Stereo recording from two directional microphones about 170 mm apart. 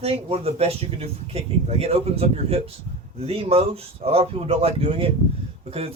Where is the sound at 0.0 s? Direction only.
35° right (ahead or behind).